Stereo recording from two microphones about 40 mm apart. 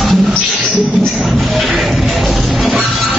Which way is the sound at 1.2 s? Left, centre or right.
Centre.